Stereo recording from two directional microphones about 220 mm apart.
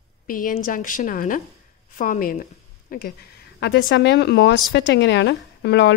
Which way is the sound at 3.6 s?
55° left (ahead or behind).